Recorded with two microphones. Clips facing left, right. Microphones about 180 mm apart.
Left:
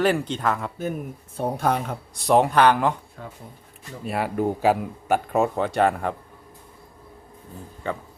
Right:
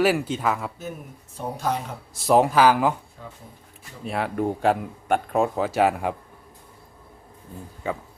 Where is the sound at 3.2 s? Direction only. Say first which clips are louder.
Left 3 dB; 60° left (ahead or behind).